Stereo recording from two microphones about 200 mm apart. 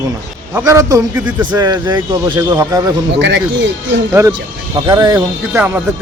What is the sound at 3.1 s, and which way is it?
Speech, 60° right (ahead or behind).